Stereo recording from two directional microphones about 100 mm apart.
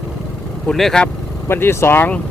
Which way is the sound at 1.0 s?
25° left (ahead or behind).